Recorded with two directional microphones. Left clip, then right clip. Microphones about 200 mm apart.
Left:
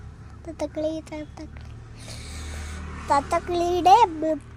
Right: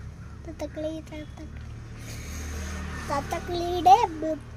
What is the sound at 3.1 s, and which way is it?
Child singing, 35° left (ahead or behind).